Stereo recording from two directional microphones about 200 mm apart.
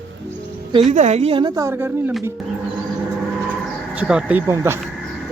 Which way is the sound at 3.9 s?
5° right (ahead or behind).